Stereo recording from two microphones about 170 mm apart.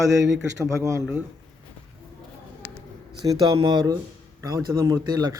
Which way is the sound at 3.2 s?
25° right (ahead or behind).